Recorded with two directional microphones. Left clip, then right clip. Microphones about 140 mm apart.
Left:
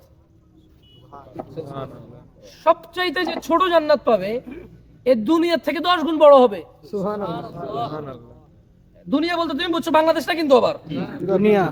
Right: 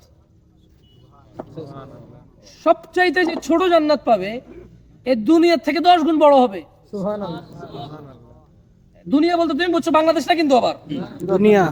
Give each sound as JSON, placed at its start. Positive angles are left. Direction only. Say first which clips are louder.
{"t": 1.7, "sound": "a man's voice", "louder": "left 5 dB", "side_deg": 20}
{"t": 11.2, "sound": "speech", "louder": "right 3 dB", "side_deg": -25}